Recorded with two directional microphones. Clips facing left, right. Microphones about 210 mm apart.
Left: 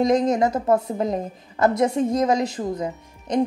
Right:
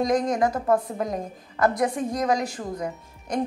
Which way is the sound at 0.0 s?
25° left (ahead or behind).